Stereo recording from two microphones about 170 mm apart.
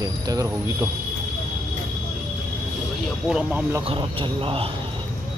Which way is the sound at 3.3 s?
5° right (ahead or behind).